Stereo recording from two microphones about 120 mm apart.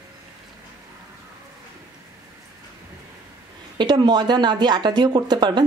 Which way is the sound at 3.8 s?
40° right (ahead or behind).